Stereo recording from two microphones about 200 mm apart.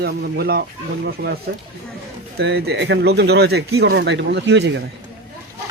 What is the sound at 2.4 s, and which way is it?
Speech, 55° right (ahead or behind).